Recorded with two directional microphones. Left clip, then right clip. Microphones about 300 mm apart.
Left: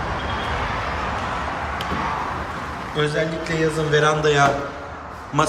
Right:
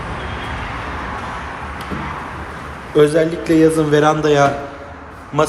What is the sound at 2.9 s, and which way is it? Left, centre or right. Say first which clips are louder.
A man's voice: right 9 dB; centre.